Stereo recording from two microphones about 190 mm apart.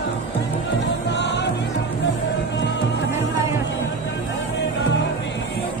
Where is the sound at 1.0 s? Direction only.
65° left (ahead or behind).